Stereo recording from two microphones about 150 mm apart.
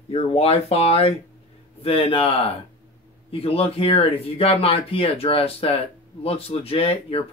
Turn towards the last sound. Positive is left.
turn(degrees=40)  # may be behind; listen again after turning